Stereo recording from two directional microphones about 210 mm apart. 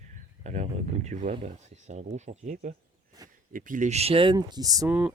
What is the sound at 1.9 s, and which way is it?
Speech, 35° right (ahead or behind).